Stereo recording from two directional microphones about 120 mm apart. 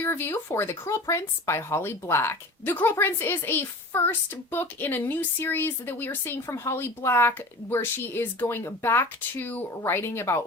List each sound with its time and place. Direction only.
0.0 s a woman's voice: 20° left (ahead or behind)